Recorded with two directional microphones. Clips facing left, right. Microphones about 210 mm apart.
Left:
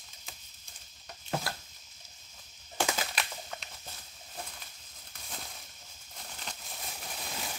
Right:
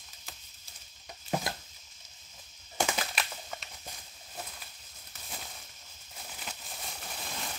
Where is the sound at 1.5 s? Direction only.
20° right (ahead or behind).